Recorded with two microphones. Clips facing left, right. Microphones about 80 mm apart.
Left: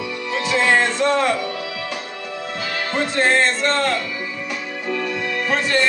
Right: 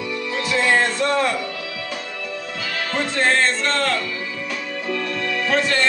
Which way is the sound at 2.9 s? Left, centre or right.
Centre.